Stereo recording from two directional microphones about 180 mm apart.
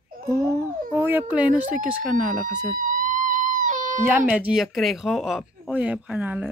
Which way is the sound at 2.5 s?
45° right (ahead or behind).